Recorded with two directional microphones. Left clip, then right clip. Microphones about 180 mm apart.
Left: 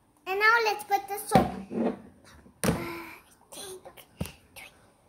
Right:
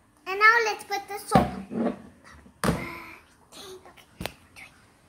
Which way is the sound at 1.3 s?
15° right (ahead or behind).